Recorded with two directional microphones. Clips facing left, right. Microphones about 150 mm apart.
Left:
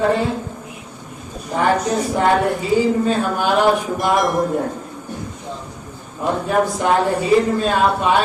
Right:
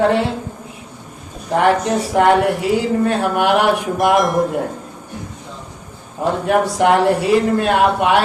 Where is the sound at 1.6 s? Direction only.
70° right (ahead or behind).